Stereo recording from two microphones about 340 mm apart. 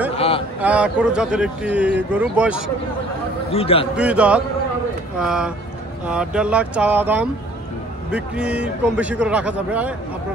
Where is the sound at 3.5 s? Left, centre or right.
Centre.